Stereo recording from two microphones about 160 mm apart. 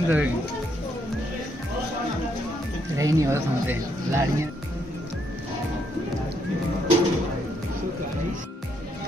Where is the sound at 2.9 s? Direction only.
20° right (ahead or behind).